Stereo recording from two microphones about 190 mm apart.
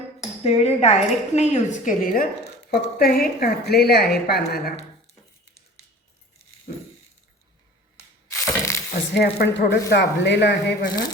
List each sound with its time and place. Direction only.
0.4 s a woman's voice: 35° left (ahead or behind); by 4.7 s 55° left (ahead or behind)
8.3 s crushing: 15° left (ahead or behind)
9.1 s a woman's voice: 60° left (ahead or behind)